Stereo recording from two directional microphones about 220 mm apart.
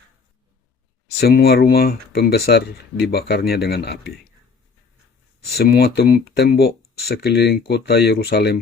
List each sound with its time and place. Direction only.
1.2 s speech: 45° left (ahead or behind)
5.5 s speech: 45° left (ahead or behind)